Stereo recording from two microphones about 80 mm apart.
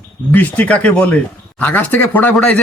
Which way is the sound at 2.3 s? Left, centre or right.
Centre.